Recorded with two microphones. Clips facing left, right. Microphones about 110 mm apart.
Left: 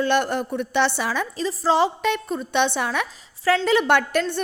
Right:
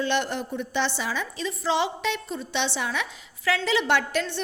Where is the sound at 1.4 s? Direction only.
35° left (ahead or behind).